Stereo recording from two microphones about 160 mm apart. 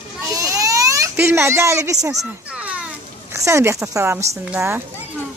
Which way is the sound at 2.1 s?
5° right (ahead or behind).